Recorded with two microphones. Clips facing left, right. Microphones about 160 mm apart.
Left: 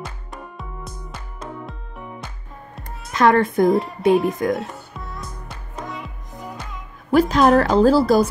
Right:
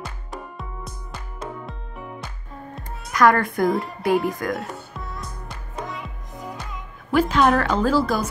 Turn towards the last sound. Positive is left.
turn(degrees=35)  # may be behind; listen again after turning